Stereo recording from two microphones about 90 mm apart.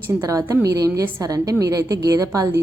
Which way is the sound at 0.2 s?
40° right (ahead or behind).